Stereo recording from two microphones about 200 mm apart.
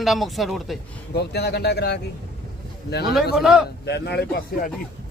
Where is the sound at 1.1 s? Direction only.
55° left (ahead or behind).